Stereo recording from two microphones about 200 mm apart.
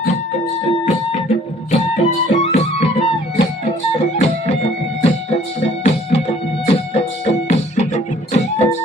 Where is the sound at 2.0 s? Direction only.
40° left (ahead or behind).